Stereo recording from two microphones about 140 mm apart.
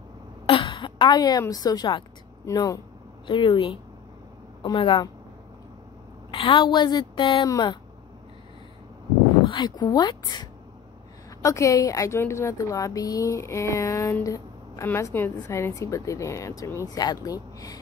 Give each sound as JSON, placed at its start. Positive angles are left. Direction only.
{"t": 0.5, "sound": "a sound", "side_deg": 35}
{"t": 1.5, "sound": "a woman's voice", "side_deg": 25}
{"t": 3.3, "sound": "a woman's voice", "side_deg": 35}
{"t": 6.3, "sound": "a woman's voice", "side_deg": 40}
{"t": 9.5, "sound": "a woman's voice", "side_deg": 30}